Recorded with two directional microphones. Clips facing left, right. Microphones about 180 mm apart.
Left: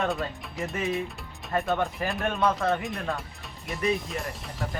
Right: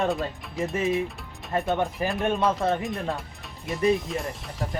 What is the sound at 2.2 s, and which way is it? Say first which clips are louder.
Speech: right 6 dB; 20° right (ahead or behind).